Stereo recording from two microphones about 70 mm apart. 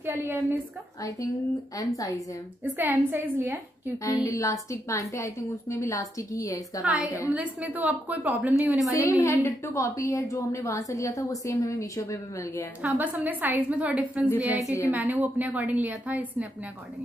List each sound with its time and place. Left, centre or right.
0.0 s a woman's voice: right
2.6 s a woman's voice: right
4.0 s a woman's voice: left
6.8 s a woman's voice: centre
8.9 s a woman's voice: left
12.8 s a woman's voice: right
14.5 s a woman's voice: left
14.9 s a woman's voice: right